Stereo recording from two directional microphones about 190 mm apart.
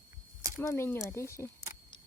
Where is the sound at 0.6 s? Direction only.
15° left (ahead or behind).